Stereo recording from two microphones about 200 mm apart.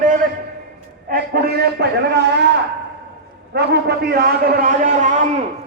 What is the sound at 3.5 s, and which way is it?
A man's voice, 55° right (ahead or behind).